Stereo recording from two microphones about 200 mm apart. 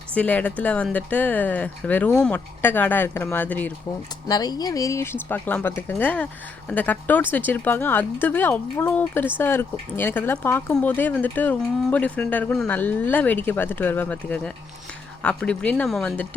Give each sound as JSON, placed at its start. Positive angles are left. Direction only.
{"t": 0.1, "sound": "speech", "side_deg": 5}
{"t": 4.3, "sound": "speech", "side_deg": 20}